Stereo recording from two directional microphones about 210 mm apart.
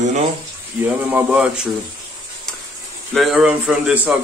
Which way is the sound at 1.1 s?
5° right (ahead or behind).